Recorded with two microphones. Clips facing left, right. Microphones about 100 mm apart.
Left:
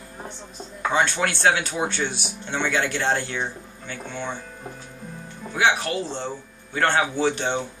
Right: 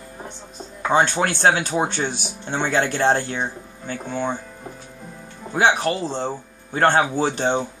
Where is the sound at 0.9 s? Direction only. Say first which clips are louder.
Right 4 dB; 35° right (ahead or behind).